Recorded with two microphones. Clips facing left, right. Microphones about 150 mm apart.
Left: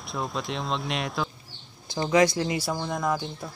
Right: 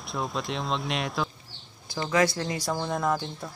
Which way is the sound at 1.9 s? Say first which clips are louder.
Left 3 dB; 20° left (ahead or behind).